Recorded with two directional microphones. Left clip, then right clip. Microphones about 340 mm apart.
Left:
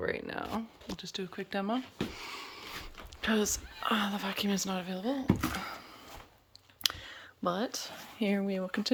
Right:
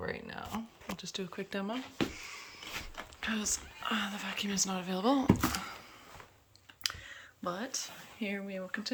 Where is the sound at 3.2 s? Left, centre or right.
Centre.